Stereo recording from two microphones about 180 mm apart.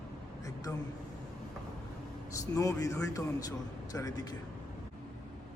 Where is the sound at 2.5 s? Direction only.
20° left (ahead or behind).